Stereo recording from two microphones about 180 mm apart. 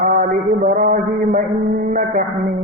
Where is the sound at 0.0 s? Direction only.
50° right (ahead or behind).